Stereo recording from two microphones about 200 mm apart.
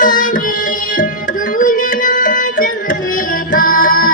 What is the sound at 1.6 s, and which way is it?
Music, 40° left (ahead or behind).